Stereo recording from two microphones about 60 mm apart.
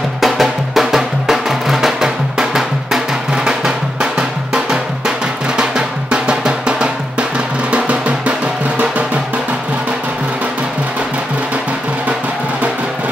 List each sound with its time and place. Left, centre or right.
0.2 s music: centre
3.4 s drum: centre
7.7 s music: right